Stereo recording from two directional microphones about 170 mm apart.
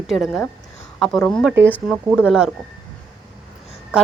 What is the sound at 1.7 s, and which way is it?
Speech, centre (ahead or behind).